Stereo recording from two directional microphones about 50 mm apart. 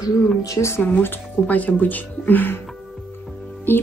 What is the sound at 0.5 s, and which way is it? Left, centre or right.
Speech, left.